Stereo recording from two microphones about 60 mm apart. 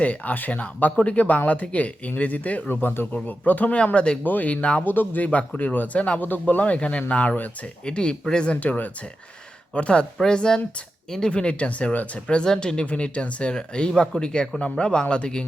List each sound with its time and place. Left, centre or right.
0.0 s speech: left
4.2 s speech: left
7.9 s speech: centre